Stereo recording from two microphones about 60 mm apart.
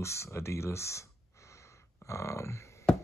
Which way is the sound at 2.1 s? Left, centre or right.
Left.